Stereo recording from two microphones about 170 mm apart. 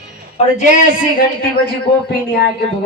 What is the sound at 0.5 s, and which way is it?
Speech, 50° left (ahead or behind).